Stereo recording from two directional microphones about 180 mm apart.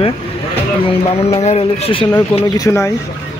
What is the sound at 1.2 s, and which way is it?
Speech, 35° left (ahead or behind).